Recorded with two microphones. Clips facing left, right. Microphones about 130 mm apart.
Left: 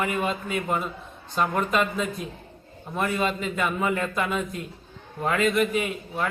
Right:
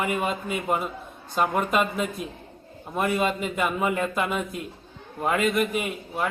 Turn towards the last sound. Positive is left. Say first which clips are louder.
# even
turn(degrees=-5)  # may be behind; listen again after turning